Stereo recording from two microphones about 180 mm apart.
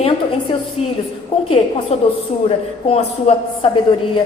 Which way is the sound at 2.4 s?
35° left (ahead or behind).